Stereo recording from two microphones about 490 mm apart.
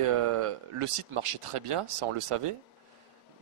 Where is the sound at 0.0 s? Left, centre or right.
Right.